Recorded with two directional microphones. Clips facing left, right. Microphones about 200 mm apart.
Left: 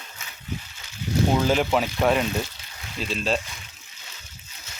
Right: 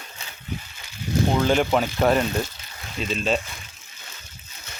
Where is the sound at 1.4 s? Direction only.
Centre (ahead or behind).